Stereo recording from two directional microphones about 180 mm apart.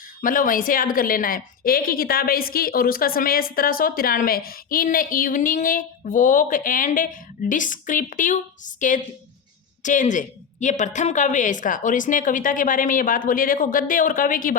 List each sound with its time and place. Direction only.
0.2 s a woman's voice: 50° left (ahead or behind)